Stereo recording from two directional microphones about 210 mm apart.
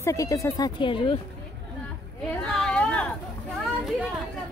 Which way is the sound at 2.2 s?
5° left (ahead or behind).